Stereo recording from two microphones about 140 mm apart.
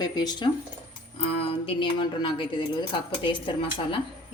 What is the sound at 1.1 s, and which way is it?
Speech, 40° left (ahead or behind).